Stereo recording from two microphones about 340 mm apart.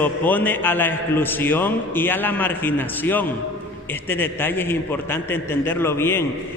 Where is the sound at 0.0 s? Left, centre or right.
Centre.